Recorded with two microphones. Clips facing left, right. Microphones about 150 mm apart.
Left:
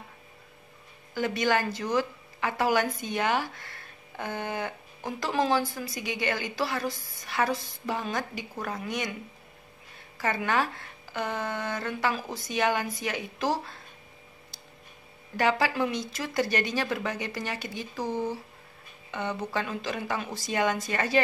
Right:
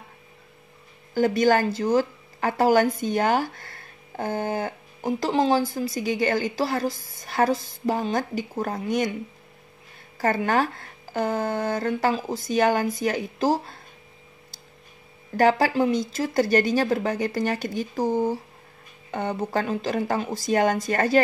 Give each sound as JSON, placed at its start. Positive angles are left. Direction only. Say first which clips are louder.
{"t": 1.1, "sound": "a woman's voice", "louder": "right 7 dB", "side_deg": -40}
{"t": 5.0, "sound": "a woman's voice", "louder": "right 6 dB", "side_deg": -25}
{"t": 10.1, "sound": "a woman's voice", "louder": "right 5 dB", "side_deg": -45}
{"t": 15.3, "sound": "speech", "louder": "right 6 dB", "side_deg": -45}